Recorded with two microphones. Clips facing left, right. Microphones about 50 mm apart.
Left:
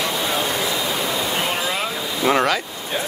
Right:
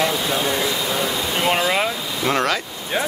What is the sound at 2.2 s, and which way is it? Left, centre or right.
Speech, centre.